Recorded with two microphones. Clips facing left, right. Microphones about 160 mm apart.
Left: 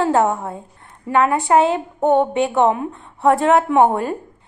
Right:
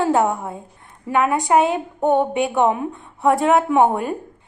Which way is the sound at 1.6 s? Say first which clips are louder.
Left 2 dB; 20° left (ahead or behind).